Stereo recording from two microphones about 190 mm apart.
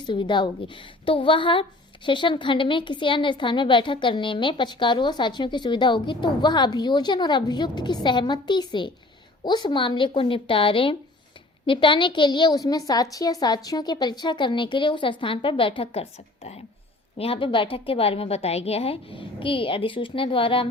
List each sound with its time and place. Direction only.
0.0 s a woman's voice: 25° left (ahead or behind)